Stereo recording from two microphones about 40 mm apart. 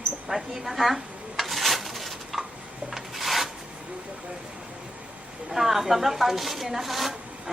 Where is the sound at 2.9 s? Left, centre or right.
Centre.